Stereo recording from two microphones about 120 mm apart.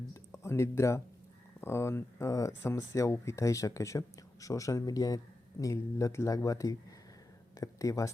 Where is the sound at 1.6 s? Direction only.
20° left (ahead or behind).